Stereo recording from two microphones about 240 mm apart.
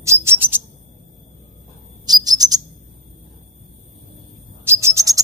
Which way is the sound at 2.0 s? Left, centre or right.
Centre.